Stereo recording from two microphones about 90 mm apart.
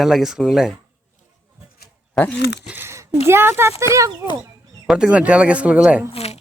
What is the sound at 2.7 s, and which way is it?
Speech, 30° right (ahead or behind).